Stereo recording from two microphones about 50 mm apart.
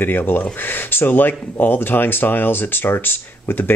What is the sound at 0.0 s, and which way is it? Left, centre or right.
Speech, left.